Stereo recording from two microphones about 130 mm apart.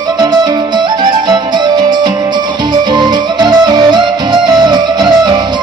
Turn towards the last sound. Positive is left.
turn(degrees=-35)  # may be behind; listen again after turning